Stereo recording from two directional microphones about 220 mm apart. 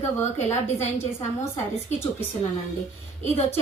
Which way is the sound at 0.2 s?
30° left (ahead or behind).